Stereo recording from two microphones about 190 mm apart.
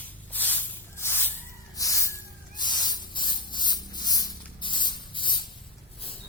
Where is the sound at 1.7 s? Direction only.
15° left (ahead or behind).